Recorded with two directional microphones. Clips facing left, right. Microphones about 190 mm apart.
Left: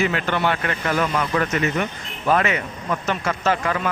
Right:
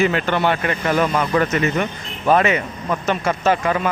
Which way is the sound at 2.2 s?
25° right (ahead or behind).